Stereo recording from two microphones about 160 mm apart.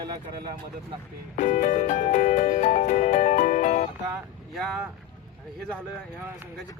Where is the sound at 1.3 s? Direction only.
50° left (ahead or behind).